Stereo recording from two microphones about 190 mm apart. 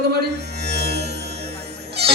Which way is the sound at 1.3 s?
35° right (ahead or behind).